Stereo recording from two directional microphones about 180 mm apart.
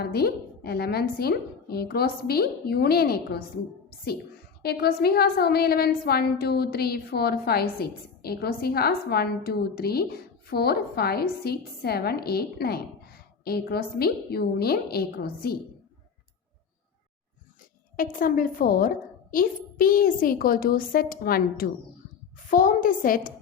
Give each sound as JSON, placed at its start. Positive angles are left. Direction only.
{"t": 0.0, "sound": "a woman's voice", "side_deg": 60}
{"t": 4.6, "sound": "a woman's voice", "side_deg": 60}
{"t": 17.9, "sound": "a woman's voice", "side_deg": 50}